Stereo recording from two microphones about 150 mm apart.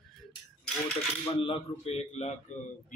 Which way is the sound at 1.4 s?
40° left (ahead or behind).